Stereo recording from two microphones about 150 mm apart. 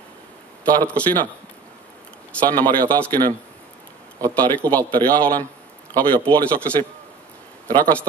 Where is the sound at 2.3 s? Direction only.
10° left (ahead or behind).